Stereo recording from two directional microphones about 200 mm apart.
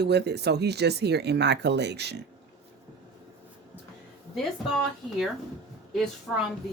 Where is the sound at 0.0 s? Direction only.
55° right (ahead or behind).